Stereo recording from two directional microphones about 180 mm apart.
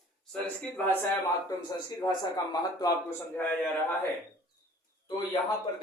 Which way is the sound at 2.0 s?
20° left (ahead or behind).